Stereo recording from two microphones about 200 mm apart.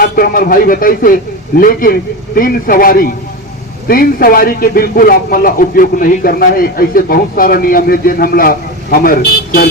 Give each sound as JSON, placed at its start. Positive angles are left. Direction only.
{"t": 0.0, "sound": "a man's voice", "side_deg": 45}